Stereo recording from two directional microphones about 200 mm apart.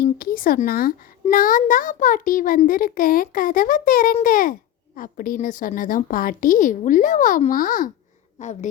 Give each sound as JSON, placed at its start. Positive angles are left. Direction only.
{"t": 0.0, "sound": "a child's voice", "side_deg": 45}